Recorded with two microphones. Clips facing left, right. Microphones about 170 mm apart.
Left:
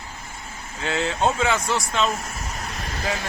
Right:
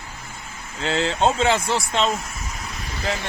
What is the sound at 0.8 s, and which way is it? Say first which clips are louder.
Speech: right 2 dB; 30° right (ahead or behind).